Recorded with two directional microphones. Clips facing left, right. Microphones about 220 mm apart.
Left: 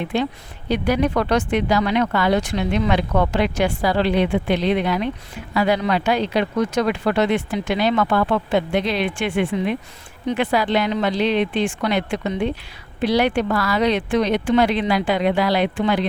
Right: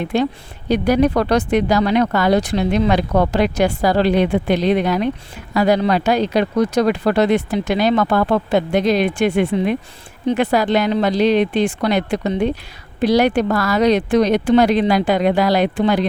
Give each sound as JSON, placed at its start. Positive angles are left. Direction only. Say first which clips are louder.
{"t": 0.1, "sound": "speech", "louder": "right 5 dB", "side_deg": -40}